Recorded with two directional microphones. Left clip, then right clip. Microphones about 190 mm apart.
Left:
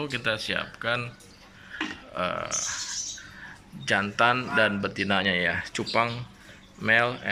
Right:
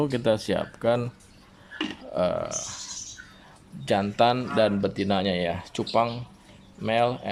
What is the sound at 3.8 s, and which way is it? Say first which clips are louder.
Speech: right 1 dB; 20° right (ahead or behind).